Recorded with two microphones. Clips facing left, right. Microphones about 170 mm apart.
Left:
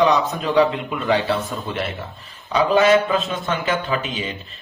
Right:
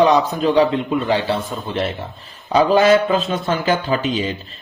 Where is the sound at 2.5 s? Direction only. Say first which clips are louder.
Right 2 dB; 35° right (ahead or behind).